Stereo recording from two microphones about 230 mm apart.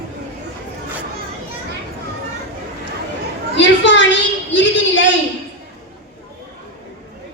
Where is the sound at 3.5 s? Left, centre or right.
Left.